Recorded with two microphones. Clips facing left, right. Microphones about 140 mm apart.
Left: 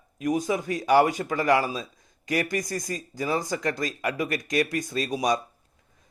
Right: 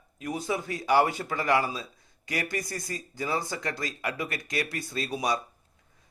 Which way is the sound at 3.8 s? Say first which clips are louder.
Left 5 dB; 20° left (ahead or behind).